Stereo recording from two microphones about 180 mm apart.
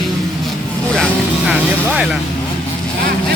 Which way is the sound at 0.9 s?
5° left (ahead or behind).